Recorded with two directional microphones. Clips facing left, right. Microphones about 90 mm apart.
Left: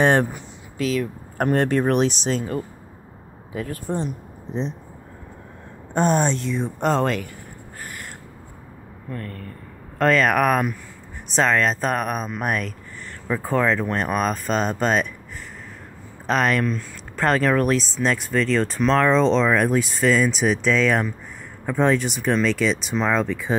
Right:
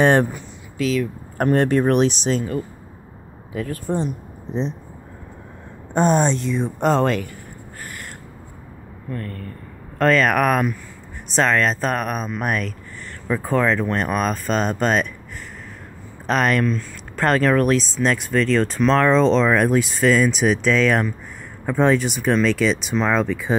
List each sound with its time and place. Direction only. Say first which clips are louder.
0.0 s speech: right 2 dB; centre (ahead or behind)
0.7 s speech: right 2 dB; 40° left (ahead or behind)
1.4 s speech: right 2 dB; centre (ahead or behind)
3.9 s speech: right 3 dB; 10° right (ahead or behind)
5.9 s speech: right 2 dB; 25° right (ahead or behind); by 7.2 s 5° right (ahead or behind)
9.9 s speech: right 1 dB; 10° left (ahead or behind)
13.3 s speech: right 1 dB; 5° left (ahead or behind)
16.3 s speech: right 1 dB; centre (ahead or behind)
16.5 s speech: right 2 dB; 10° left (ahead or behind)
21.6 s speech: right 2 dB; 10° right (ahead or behind)